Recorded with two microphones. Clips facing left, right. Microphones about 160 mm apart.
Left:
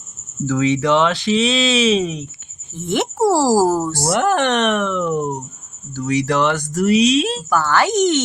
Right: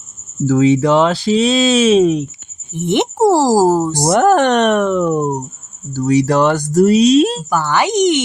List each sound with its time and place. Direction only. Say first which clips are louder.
0.4 s speech: right 5 dB; 35° right (ahead or behind); by 2.2 s 50° right (ahead or behind)
2.7 s speech: right 4 dB; 20° right (ahead or behind)
4.1 s speech: right 6 dB; 45° right (ahead or behind)
7.5 s speech: left 3 dB; 15° right (ahead or behind)